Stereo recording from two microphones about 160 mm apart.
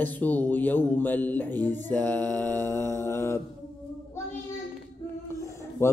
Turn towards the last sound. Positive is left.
turn(degrees=15)  # may be behind; listen again after turning